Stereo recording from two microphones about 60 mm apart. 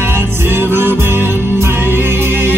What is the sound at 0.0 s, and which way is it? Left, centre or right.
Music, right.